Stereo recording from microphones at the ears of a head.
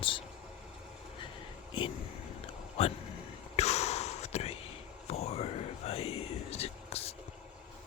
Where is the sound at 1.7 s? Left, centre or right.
Left.